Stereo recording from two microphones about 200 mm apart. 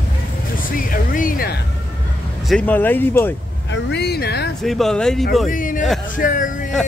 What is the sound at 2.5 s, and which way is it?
Speech, 5° left (ahead or behind).